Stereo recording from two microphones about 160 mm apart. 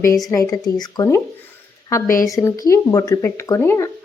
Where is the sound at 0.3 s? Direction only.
20° left (ahead or behind).